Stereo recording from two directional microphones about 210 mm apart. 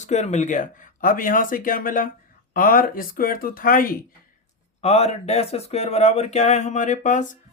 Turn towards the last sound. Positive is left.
turn(degrees=35)  # may be behind; listen again after turning